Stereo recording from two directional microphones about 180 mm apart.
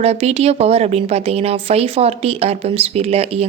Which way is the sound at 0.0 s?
35° right (ahead or behind).